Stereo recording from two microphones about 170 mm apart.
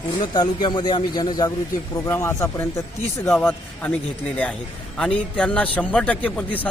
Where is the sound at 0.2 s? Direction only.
25° left (ahead or behind).